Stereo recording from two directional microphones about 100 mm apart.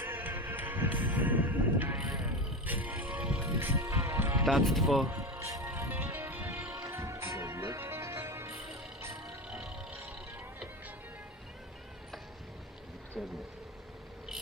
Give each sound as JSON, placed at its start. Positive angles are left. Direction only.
{"t": 0.0, "sound": "music", "side_deg": -20}
{"t": 3.8, "sound": "music", "side_deg": -30}
{"t": 4.4, "sound": "speech", "side_deg": 0}
{"t": 5.0, "sound": "music", "side_deg": -25}
{"t": 9.2, "sound": "music", "side_deg": -10}
{"t": 13.2, "sound": "vehicle", "side_deg": -5}